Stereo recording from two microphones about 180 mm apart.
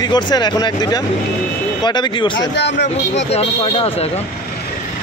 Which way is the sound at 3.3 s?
35° left (ahead or behind).